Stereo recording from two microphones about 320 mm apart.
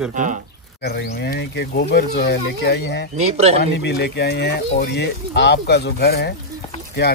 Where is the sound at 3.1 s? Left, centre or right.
Centre.